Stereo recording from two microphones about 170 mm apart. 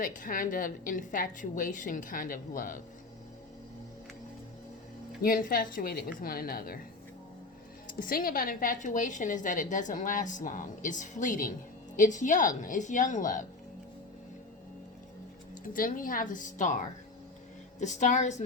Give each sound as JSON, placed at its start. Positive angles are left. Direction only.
{"t": 0.0, "sound": "a woman's voice", "side_deg": 50}
{"t": 5.2, "sound": "a woman's voice", "side_deg": 60}
{"t": 7.9, "sound": "a woman's voice", "side_deg": 55}
{"t": 15.6, "sound": "a woman's voice", "side_deg": 55}
{"t": 17.7, "sound": "a woman's voice", "side_deg": 45}